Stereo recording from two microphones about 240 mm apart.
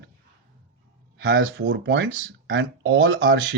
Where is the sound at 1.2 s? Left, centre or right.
Right.